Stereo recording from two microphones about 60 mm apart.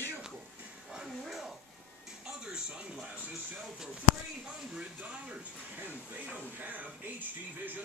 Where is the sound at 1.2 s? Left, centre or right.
Centre.